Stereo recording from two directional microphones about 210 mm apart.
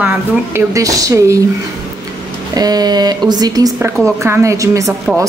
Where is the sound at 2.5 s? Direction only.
20° right (ahead or behind).